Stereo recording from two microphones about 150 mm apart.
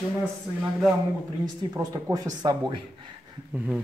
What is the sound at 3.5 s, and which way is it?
Speech, 10° right (ahead or behind).